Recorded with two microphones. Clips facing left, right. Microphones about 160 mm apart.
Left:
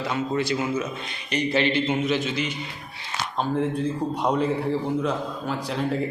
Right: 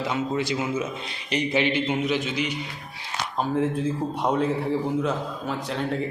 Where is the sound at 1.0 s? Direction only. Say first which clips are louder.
Even; 20° right (ahead or behind).